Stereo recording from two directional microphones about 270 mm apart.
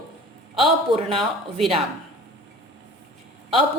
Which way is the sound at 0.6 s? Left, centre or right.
Centre.